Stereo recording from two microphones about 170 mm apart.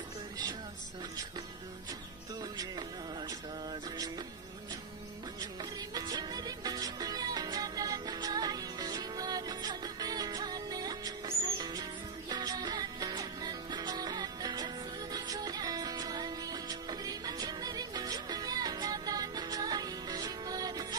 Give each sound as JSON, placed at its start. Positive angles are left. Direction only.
{"t": 2.5, "sound": "music", "side_deg": -25}
{"t": 5.6, "sound": "music", "side_deg": -25}